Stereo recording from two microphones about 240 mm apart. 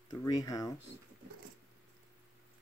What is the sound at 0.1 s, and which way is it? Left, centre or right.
Speech, centre.